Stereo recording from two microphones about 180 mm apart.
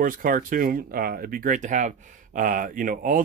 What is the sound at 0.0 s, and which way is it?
Speech, 50° right (ahead or behind).